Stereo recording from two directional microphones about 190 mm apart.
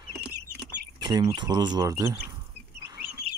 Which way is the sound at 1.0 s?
20° right (ahead or behind).